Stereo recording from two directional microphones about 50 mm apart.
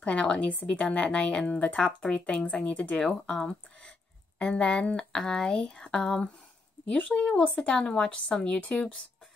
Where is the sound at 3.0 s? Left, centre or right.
Centre.